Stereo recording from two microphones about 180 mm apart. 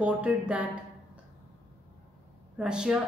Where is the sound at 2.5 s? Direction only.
5° right (ahead or behind).